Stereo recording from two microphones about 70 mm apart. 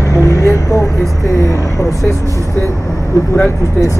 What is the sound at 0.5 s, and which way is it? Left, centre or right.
Speech, left.